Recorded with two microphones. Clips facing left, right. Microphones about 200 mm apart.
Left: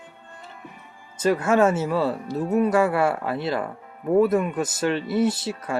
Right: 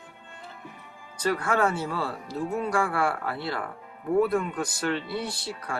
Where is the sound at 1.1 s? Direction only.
25° left (ahead or behind).